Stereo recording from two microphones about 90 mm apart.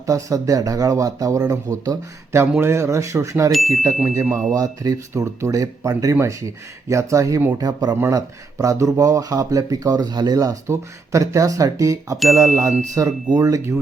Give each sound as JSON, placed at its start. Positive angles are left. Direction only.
{"t": 0.0, "sound": "speech", "side_deg": -40}
{"t": 4.5, "sound": "speech", "side_deg": -45}